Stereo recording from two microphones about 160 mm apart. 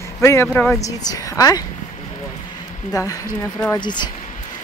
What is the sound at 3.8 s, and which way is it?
Speech, 30° left (ahead or behind).